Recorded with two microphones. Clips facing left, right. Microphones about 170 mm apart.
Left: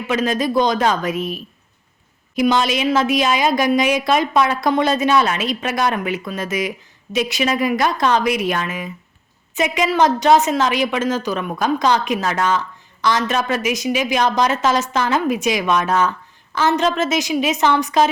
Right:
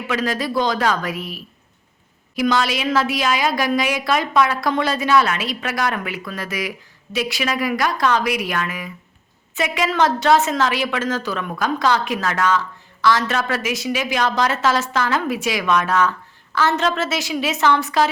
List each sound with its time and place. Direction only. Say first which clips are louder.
0.1 s a woman's voice: left 4 dB; 20° left (ahead or behind)